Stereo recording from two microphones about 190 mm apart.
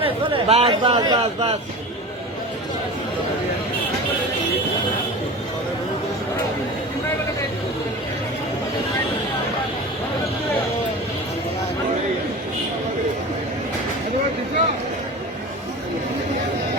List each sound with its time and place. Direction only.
0.0 s speech: 30° right (ahead or behind)